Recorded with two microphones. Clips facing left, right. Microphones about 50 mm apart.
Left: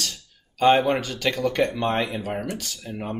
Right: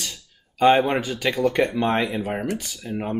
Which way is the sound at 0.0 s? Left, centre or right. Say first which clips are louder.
Left 2 dB; right.